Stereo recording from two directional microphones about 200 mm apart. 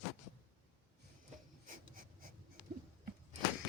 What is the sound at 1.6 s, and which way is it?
Writing, 45° right (ahead or behind).